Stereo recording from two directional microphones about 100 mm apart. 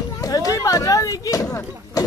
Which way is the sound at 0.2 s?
35° left (ahead or behind).